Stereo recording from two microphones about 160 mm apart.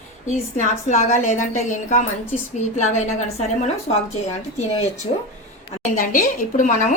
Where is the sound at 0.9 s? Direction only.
50° left (ahead or behind).